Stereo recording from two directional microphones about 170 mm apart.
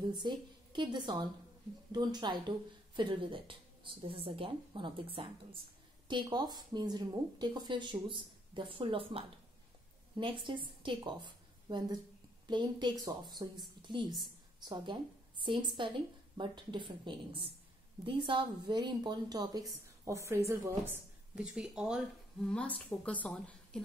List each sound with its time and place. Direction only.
0.1 s a woman's voice: 25° right (ahead or behind); by 22.0 s 5° right (ahead or behind)
22.5 s a woman's voice: 5° left (ahead or behind)